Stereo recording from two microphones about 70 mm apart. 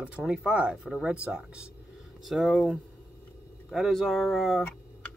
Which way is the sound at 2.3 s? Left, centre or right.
Centre.